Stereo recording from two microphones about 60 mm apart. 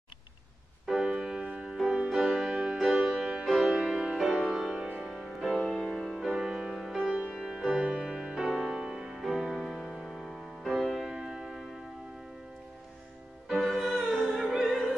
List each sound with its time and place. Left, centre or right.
0.8 s music: centre
7.0 s music: centre
7.2 s music: centre
13.6 s music: centre
14.6 s opera: centre